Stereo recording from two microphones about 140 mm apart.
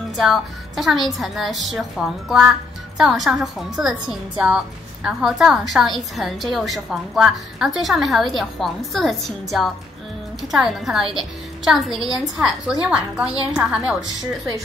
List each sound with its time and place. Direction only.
0.2 s a woman's voice: centre (ahead or behind)